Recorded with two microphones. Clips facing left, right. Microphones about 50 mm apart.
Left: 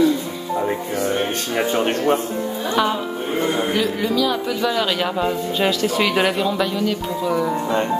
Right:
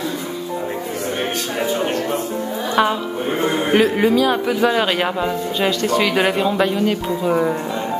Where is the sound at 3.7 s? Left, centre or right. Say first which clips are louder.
Right 6 dB; right.